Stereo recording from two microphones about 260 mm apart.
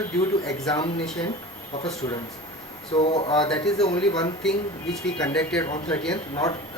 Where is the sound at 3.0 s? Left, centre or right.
Left.